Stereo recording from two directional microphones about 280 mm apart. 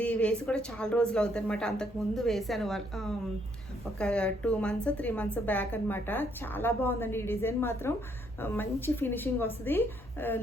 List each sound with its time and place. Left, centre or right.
0.0 s a woman's voice: centre